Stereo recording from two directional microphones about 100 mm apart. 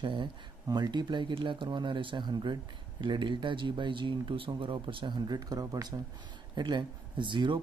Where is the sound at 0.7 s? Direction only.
45° right (ahead or behind).